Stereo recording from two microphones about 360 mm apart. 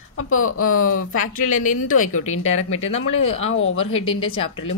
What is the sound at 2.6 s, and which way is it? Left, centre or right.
Speech, centre.